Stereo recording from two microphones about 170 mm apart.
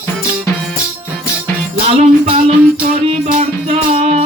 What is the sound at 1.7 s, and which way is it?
Music, 35° right (ahead or behind).